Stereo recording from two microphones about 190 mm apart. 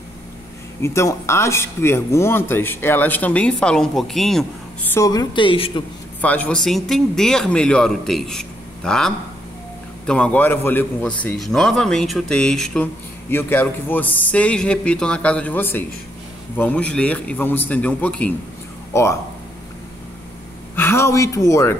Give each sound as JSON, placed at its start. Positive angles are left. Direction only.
{"t": 0.8, "sound": "speech", "side_deg": 15}
{"t": 4.9, "sound": "a woman's voice", "side_deg": 20}
{"t": 6.2, "sound": "a man's voice", "side_deg": 10}
{"t": 20.7, "sound": "speech", "side_deg": 10}